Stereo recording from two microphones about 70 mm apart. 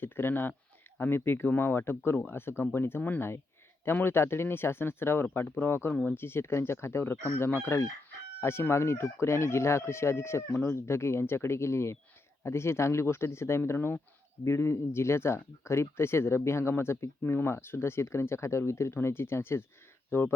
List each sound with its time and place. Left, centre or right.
0.0 s speech: left